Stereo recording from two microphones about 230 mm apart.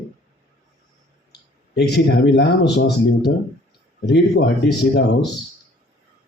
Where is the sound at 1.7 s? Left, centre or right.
Left.